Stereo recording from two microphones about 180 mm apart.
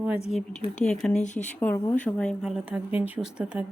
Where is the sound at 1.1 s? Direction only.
40° left (ahead or behind).